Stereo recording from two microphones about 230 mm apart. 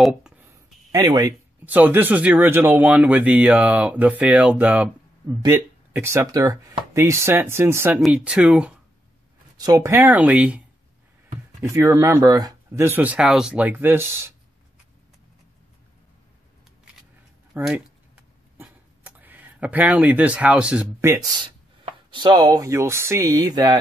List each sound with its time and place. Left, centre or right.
0.0 s a sound: centre
0.9 s speech: centre
11.6 s speech: centre
17.6 s speech: centre
18.6 s a sound: centre
21.5 s speech: right